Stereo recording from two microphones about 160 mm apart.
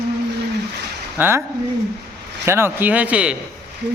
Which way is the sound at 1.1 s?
15° right (ahead or behind).